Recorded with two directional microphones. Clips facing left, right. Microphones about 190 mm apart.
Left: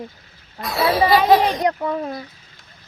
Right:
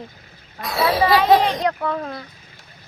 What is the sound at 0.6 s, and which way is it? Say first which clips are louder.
Speech: left 1 dB; centre (ahead or behind).